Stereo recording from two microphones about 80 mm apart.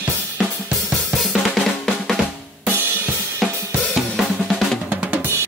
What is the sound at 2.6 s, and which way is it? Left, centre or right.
Drum kit, right.